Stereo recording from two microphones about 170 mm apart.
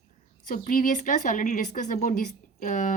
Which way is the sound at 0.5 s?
55° left (ahead or behind).